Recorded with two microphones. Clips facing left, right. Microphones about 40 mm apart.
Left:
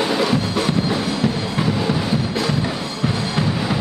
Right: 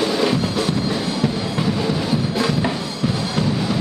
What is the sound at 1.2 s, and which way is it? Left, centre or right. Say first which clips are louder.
Music: even; centre.